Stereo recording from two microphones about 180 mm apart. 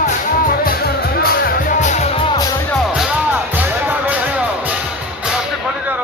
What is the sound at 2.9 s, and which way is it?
Music, 10° right (ahead or behind).